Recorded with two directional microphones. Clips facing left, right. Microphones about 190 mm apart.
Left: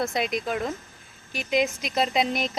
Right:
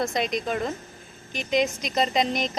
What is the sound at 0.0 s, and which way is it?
Speech, centre (ahead or behind).